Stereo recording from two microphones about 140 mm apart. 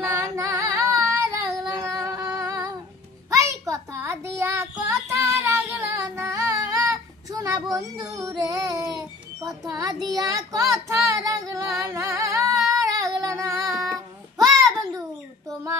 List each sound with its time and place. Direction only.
0.0 s singing: 25° right (ahead or behind)
3.3 s child singing: 25° right (ahead or behind)
8.1 s music: 25° right (ahead or behind)
9.4 s a child's voice: 25° right (ahead or behind)
10.0 s female singing: 25° right (ahead or behind)
14.4 s a sound: 25° right (ahead or behind)